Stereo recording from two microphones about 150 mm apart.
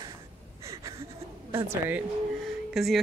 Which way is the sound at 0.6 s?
20° right (ahead or behind).